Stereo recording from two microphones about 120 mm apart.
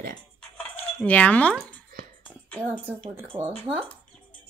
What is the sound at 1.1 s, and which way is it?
Speech, 10° left (ahead or behind).